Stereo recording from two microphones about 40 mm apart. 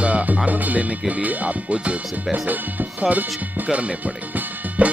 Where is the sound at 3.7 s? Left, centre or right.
Right.